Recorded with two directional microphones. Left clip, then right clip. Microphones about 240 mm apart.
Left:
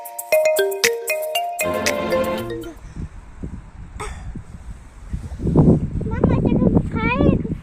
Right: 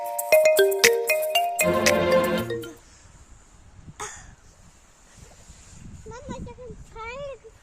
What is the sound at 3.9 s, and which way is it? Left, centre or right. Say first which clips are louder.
Cough: left 4 dB; centre.